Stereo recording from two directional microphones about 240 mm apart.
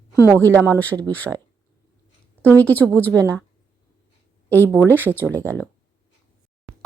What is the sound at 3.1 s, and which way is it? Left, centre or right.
Speech, centre.